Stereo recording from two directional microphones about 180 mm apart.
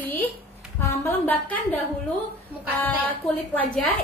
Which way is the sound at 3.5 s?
5° left (ahead or behind).